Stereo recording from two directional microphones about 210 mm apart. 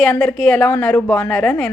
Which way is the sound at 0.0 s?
5° left (ahead or behind).